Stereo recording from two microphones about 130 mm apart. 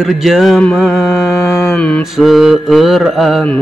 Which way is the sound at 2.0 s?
Centre (ahead or behind).